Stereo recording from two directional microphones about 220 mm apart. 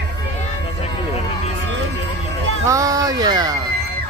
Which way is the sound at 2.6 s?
15° right (ahead or behind).